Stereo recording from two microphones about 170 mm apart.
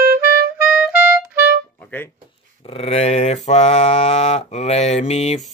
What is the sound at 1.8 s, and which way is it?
Music, 10° left (ahead or behind).